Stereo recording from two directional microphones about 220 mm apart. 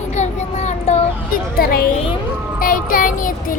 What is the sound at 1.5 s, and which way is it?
A woman's voice, 45° left (ahead or behind).